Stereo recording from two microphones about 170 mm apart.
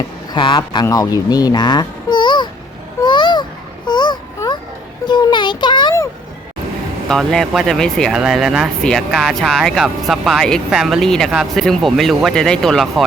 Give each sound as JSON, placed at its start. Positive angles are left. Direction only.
{"t": 0.3, "sound": "speech", "side_deg": 30}
{"t": 3.0, "sound": "babbling", "side_deg": 25}
{"t": 3.8, "sound": "a sound", "side_deg": 25}
{"t": 5.0, "sound": "a child's voice", "side_deg": 25}
{"t": 7.1, "sound": "speech", "side_deg": 5}